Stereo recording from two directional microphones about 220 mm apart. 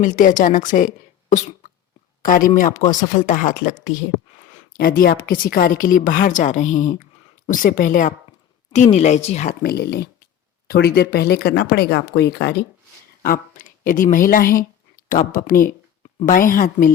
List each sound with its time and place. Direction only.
0.0 s a woman's voice: 35° left (ahead or behind)